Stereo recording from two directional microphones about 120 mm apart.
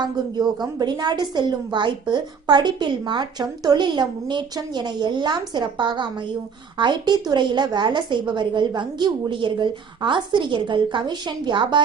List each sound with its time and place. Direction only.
0.0 s a woman's voice: 35° right (ahead or behind)